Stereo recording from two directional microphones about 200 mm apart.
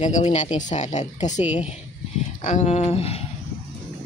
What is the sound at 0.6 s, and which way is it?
Speech, 35° left (ahead or behind).